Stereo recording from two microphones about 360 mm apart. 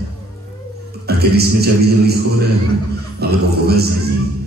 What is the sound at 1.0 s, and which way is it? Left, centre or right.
A man's voice, right.